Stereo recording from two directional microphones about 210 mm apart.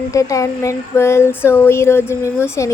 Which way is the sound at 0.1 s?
15° left (ahead or behind).